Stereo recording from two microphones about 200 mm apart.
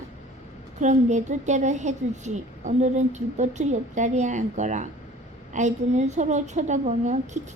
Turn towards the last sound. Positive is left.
turn(degrees=-35)  # may be behind; listen again after turning